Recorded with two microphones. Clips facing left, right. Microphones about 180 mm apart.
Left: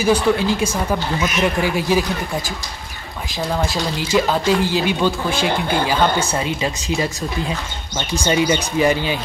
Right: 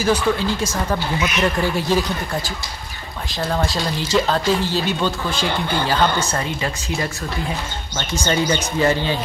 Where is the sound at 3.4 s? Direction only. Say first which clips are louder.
Left 1 dB; centre (ahead or behind); by 7.1 s 15° left (ahead or behind).